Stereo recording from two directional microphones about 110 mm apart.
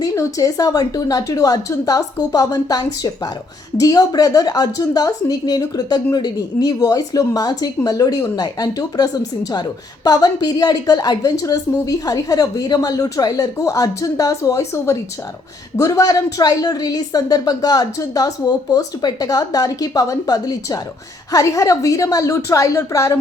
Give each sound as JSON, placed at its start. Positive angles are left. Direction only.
{"t": 0.0, "sound": "a woman's voice", "side_deg": 30}